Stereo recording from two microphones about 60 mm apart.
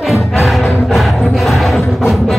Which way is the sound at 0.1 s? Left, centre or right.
Centre.